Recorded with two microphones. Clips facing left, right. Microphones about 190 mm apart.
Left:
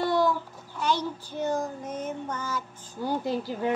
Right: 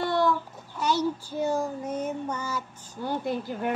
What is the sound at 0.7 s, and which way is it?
Child singing, 10° right (ahead or behind).